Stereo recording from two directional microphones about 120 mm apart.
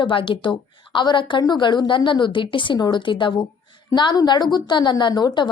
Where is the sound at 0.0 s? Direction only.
45° left (ahead or behind).